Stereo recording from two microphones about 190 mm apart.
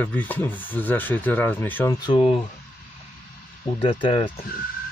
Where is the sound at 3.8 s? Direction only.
30° left (ahead or behind).